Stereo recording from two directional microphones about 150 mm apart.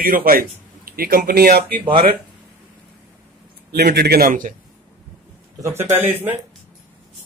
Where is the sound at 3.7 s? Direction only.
90° right; by 4.5 s 65° right (ahead or behind).